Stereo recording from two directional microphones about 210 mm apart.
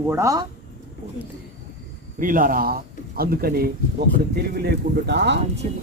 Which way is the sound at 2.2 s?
40° right (ahead or behind).